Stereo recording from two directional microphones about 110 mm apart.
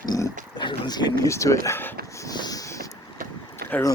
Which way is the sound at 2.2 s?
35° left (ahead or behind).